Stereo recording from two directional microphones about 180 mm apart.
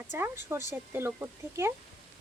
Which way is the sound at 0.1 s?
15° right (ahead or behind).